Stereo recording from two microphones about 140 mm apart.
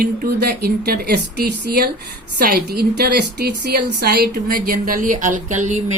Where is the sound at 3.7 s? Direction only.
90° right.